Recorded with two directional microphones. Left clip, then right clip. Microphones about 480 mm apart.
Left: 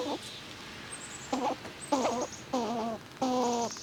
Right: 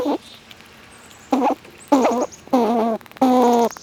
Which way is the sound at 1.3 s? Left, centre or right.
Right.